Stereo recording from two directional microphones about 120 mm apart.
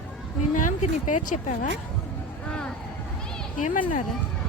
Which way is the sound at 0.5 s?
90° left.